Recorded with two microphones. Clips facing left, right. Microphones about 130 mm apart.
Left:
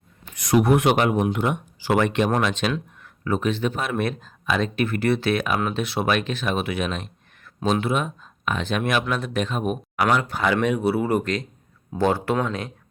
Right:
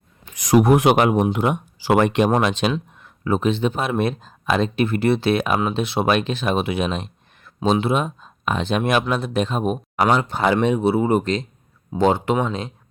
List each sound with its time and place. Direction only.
0.5 s speech: 40° right (ahead or behind)
1.4 s speech: 50° right (ahead or behind)
2.4 s speech: 30° right (ahead or behind)